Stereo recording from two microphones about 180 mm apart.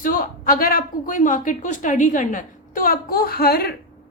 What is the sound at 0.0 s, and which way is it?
A woman's voice, 50° left (ahead or behind).